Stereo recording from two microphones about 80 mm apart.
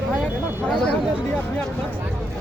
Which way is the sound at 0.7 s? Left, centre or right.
Centre.